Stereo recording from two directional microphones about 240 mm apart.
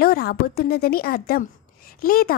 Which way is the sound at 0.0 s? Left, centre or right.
Left.